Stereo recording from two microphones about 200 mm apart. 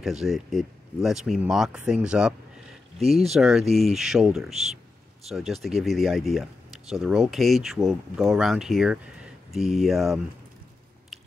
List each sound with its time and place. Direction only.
0.0 s speech: centre (ahead or behind)
3.0 s speech: 30° right (ahead or behind)
3.3 s speech: centre (ahead or behind)